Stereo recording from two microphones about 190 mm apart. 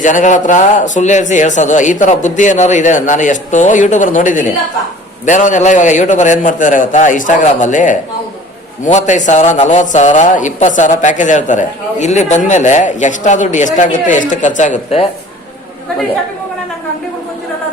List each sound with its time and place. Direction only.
0.0 s a man's voice: 40° left (ahead or behind)